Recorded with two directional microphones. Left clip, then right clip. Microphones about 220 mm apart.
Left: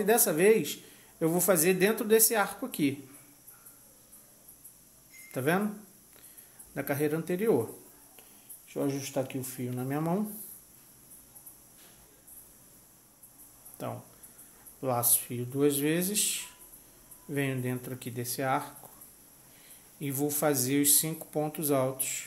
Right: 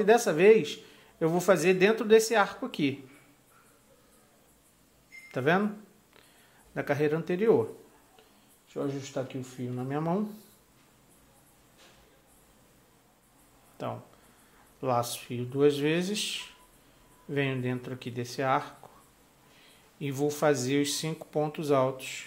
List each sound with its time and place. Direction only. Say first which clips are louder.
0.0 s speech: right 3 dB; 5° right (ahead or behind)
5.3 s speech: right 3 dB; 5° right (ahead or behind)
6.7 s speech: right 3 dB; 10° right (ahead or behind)
8.8 s speech: left 2 dB; 40° left (ahead or behind)
9.1 s speech: left 2 dB; 10° left (ahead or behind)
13.8 s speech: right 2 dB; 5° right (ahead or behind)
20.0 s speech: right 2 dB; 5° right (ahead or behind)